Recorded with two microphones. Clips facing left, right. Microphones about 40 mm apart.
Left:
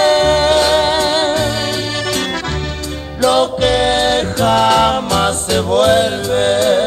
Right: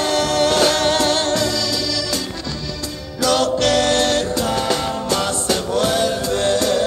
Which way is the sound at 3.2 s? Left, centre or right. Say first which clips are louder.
Left 4 dB; left.